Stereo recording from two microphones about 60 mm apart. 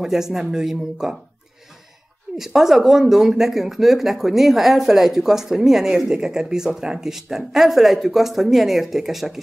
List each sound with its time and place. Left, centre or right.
0.0 s speech: centre
2.3 s speech: centre